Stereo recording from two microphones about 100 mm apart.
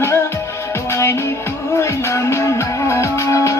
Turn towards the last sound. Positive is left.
turn(degrees=30)  # may be behind; listen again after turning